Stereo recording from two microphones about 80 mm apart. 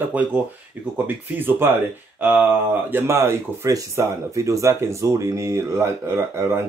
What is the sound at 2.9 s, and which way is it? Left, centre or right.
Speech, right.